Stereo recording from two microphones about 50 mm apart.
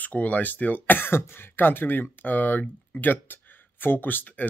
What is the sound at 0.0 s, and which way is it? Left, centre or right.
Speech, left.